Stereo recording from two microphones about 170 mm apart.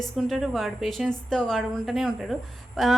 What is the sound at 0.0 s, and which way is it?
A woman's voice, centre (ahead or behind).